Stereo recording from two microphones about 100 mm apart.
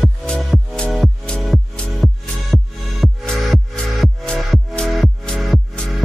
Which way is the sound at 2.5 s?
Centre (ahead or behind).